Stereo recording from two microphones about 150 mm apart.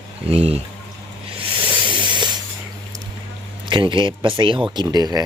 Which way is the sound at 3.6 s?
30° right (ahead or behind).